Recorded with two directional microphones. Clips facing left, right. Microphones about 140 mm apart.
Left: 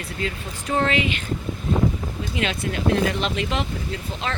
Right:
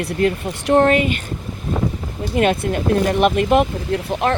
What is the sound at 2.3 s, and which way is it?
Speech, 55° right (ahead or behind).